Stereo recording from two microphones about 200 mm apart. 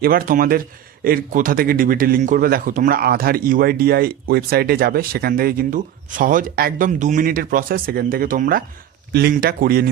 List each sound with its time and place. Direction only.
0.0 s speech: 45° right (ahead or behind)